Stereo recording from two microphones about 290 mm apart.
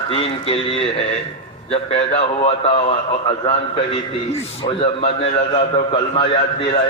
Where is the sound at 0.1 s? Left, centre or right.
Centre.